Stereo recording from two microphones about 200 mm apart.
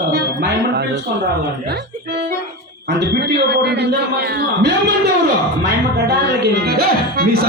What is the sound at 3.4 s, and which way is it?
Speech, 55° right (ahead or behind).